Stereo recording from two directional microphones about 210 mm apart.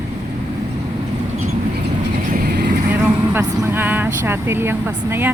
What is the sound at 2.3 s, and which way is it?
Vehicle, 45° right (ahead or behind).